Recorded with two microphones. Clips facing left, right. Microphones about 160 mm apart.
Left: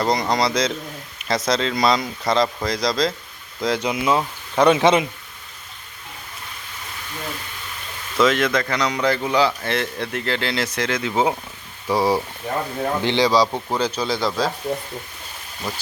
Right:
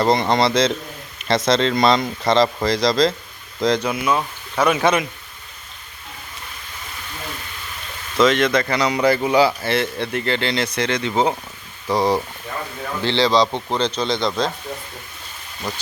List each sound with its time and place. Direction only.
0.0 s speech: centre (ahead or behind)
3.8 s speech: 20° left (ahead or behind)
8.2 s a man's voice: 5° left (ahead or behind)
15.7 s speech: 5° left (ahead or behind)